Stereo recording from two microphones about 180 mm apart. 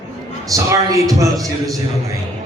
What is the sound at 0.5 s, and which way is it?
A man's voice, 20° right (ahead or behind).